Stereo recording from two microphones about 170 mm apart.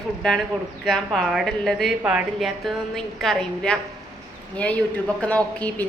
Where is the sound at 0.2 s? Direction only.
5° left (ahead or behind).